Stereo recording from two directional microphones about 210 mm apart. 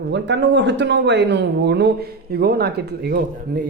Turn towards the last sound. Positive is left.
turn(degrees=-50)  # may be behind; listen again after turning